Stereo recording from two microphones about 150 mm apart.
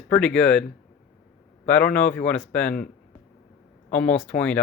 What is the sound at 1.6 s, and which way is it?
Speech, 10° left (ahead or behind).